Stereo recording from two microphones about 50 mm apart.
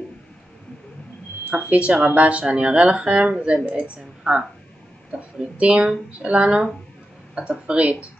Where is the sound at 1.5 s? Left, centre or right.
Right.